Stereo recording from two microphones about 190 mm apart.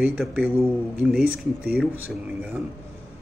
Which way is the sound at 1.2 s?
50° right (ahead or behind).